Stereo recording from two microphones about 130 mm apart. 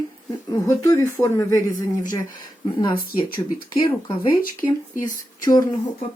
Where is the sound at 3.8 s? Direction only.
25° left (ahead or behind).